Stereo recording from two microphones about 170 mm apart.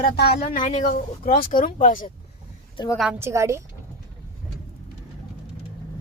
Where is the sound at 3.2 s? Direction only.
15° right (ahead or behind).